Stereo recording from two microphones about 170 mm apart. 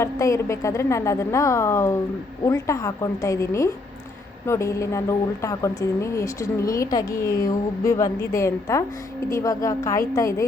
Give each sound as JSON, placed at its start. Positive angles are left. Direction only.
{"t": 0.0, "sound": "speech", "side_deg": 15}